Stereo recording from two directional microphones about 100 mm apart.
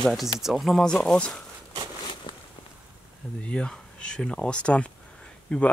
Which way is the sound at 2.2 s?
60° left (ahead or behind).